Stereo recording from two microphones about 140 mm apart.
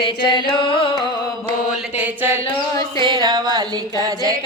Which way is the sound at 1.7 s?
10° right (ahead or behind).